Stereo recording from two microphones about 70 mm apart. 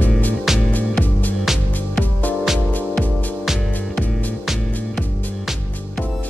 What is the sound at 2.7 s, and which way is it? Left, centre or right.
Music, left.